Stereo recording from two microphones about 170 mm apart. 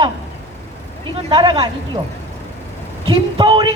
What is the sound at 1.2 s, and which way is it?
Speech, 30° right (ahead or behind).